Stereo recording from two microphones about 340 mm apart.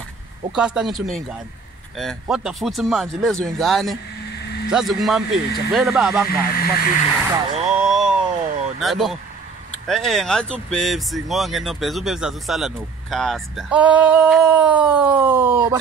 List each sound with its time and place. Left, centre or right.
0.6 s speech: centre
6.6 s speech: left
7.3 s speech: centre
7.7 s vehicle: centre
8.7 s speech: centre